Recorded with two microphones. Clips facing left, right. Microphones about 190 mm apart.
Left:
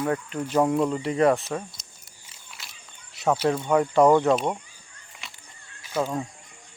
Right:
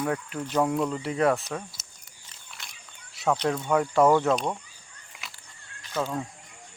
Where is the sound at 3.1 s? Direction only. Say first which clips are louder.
Left 3 dB; 5° left (ahead or behind).